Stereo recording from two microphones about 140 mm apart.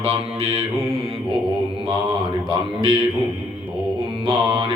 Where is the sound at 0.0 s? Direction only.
45° right (ahead or behind).